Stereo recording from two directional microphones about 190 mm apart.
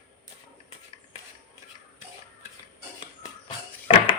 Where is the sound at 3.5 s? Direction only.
25° left (ahead or behind).